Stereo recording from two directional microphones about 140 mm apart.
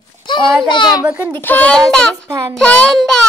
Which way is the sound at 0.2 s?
35° left (ahead or behind).